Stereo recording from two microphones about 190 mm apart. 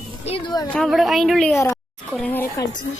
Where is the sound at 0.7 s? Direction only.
Centre (ahead or behind).